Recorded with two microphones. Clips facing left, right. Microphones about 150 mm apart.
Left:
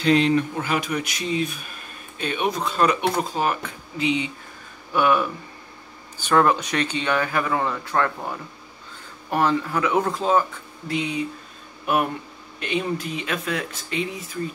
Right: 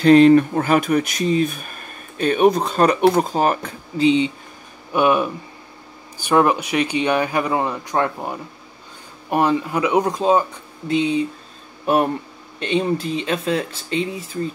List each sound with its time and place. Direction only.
0.0 s speech: 50° right (ahead or behind)
4.0 s speech: 30° right (ahead or behind)
4.9 s speech: 20° right (ahead or behind)